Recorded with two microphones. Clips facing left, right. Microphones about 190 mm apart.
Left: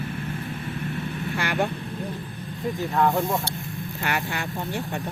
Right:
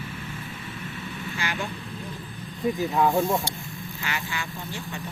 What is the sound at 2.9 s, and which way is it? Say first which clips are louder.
Speech: left 2 dB; 10° right (ahead or behind).